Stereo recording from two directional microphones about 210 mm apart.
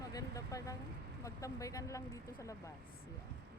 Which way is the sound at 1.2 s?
15° left (ahead or behind).